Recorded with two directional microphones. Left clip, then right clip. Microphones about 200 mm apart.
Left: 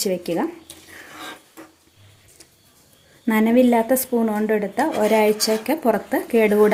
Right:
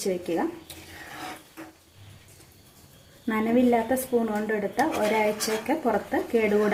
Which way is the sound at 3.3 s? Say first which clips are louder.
Left 6 dB; 45° left (ahead or behind).